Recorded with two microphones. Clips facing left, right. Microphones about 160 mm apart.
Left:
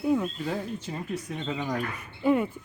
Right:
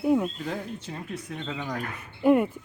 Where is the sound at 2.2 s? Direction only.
5° right (ahead or behind).